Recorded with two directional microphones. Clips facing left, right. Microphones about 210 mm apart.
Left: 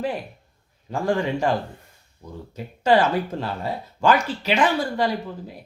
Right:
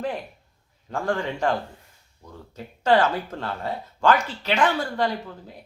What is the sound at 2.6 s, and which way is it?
Speech, 15° left (ahead or behind).